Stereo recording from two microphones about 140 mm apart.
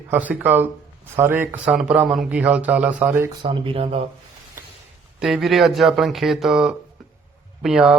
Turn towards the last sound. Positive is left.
turn(degrees=-5)  # may be behind; listen again after turning